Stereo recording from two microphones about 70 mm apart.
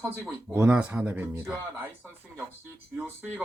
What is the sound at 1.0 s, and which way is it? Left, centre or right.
Speech, right.